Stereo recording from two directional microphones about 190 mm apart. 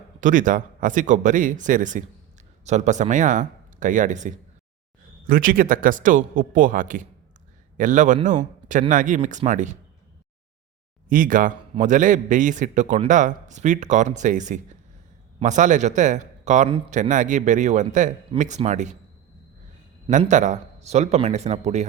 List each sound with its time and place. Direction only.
0.2 s a man's voice: 45° right (ahead or behind)
11.1 s a man's voice: 45° right (ahead or behind)
20.1 s a man's voice: 40° right (ahead or behind)